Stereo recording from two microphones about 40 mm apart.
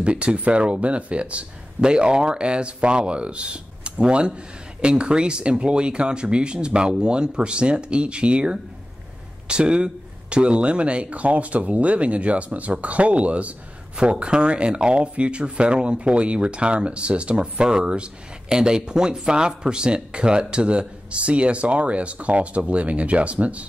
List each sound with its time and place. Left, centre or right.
0.0 s speech: right